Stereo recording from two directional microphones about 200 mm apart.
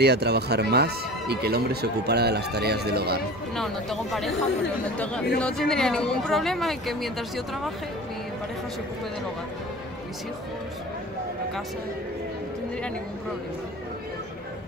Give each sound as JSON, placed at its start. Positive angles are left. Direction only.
{"t": 0.0, "sound": "speech", "side_deg": -55}
{"t": 3.5, "sound": "speech", "side_deg": 0}